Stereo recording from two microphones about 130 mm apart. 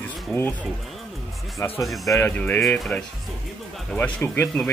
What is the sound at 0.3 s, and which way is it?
Speech, 10° left (ahead or behind).